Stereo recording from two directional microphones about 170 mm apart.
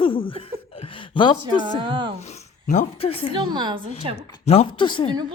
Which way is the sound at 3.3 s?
30° right (ahead or behind).